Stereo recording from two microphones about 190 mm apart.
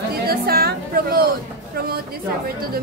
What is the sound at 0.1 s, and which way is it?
Chatter, 55° right (ahead or behind).